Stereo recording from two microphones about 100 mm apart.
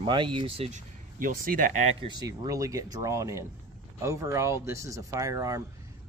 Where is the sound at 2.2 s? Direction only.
35° right (ahead or behind).